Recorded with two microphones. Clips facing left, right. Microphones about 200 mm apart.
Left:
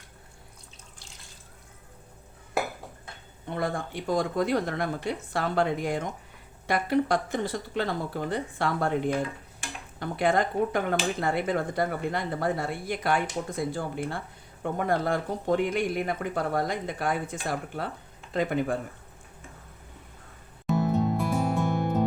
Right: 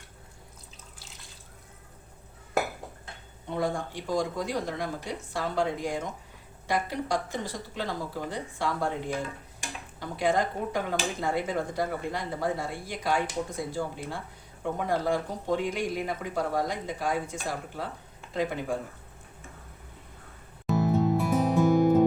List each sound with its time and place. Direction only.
3.5 s speech: 60° left (ahead or behind)
10.0 s speech: 60° left (ahead or behind)
20.7 s music: centre (ahead or behind)